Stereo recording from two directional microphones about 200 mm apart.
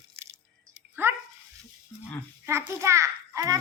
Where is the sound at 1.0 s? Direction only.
10° right (ahead or behind).